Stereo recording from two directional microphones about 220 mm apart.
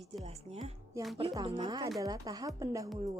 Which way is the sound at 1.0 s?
15° right (ahead or behind).